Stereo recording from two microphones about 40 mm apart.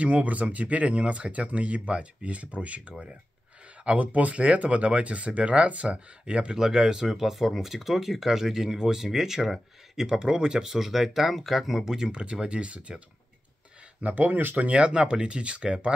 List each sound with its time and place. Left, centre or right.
0.0 s speech: right
6.5 s speech: centre
12.1 s speech: right
14.1 s speech: right
14.7 s speech: right